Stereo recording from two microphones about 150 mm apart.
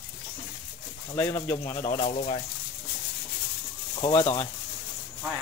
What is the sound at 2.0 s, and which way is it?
Speech, 50° left (ahead or behind).